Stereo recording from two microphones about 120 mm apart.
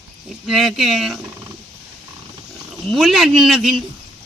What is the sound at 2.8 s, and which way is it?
Speech, centre (ahead or behind).